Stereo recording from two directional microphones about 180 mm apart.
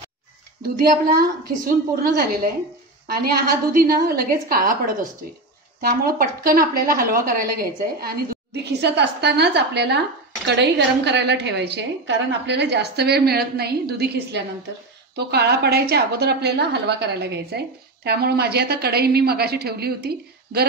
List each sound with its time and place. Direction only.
0.6 s a woman's voice: 55° right (ahead or behind)